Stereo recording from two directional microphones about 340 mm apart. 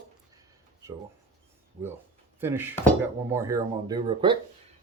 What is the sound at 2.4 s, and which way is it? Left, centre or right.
Speech, centre.